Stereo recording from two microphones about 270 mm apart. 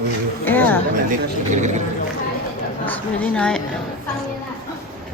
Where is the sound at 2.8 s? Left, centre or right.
Centre.